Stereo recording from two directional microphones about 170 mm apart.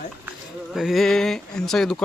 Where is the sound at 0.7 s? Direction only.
Centre (ahead or behind).